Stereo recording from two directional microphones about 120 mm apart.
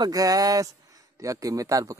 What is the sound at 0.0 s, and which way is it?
Speech, 30° right (ahead or behind).